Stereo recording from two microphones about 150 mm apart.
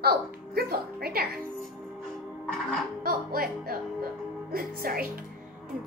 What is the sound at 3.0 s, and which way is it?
Speech, 80° right.